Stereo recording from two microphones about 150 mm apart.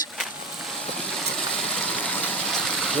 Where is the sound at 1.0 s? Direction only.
5° left (ahead or behind).